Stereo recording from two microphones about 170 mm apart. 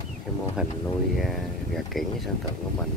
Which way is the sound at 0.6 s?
5° right (ahead or behind).